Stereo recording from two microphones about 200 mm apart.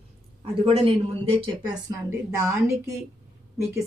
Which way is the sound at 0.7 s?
25° right (ahead or behind).